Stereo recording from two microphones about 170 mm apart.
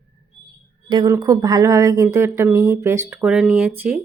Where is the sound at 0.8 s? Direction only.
20° right (ahead or behind).